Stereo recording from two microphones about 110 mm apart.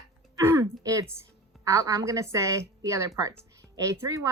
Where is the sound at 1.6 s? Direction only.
30° right (ahead or behind).